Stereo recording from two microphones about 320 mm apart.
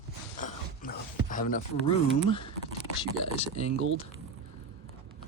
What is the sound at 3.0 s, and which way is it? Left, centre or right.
Speech, centre.